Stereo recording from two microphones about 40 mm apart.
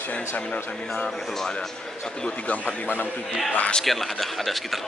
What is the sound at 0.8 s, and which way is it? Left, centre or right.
Speech, left.